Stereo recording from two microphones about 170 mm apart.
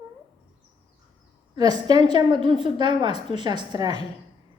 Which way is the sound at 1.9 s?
25° right (ahead or behind).